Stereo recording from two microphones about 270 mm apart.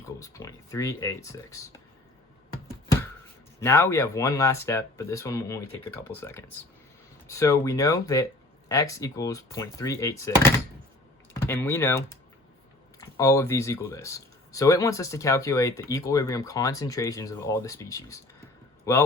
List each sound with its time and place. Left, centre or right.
0.2 s speech: centre
3.6 s speech: centre
11.3 s speech: centre